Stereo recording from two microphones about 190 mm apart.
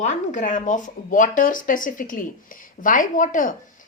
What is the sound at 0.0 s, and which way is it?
A woman's voice, 40° left (ahead or behind).